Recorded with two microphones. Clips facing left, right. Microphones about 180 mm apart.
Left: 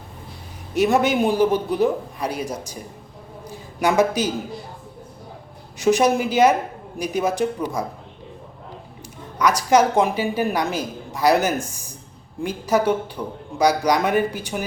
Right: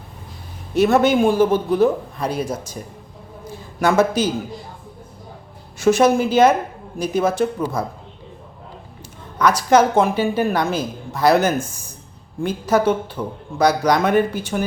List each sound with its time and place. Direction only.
0.7 s speech: 15° left (ahead or behind)
3.8 s speech: 15° left (ahead or behind)
5.8 s speech: 15° left (ahead or behind)
9.4 s speech: 15° left (ahead or behind)